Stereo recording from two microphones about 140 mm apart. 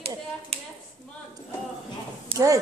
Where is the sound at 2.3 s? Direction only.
40° right (ahead or behind).